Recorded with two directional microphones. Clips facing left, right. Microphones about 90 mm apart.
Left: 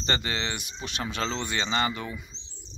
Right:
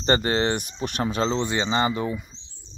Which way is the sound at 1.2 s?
25° right (ahead or behind).